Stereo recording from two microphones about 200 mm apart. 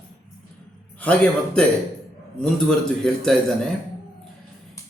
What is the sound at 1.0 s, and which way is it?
Music, 5° left (ahead or behind).